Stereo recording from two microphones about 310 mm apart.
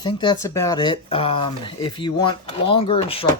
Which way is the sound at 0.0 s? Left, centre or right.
Centre.